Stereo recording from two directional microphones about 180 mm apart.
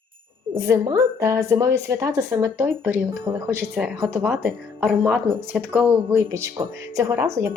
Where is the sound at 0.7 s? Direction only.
15° right (ahead or behind).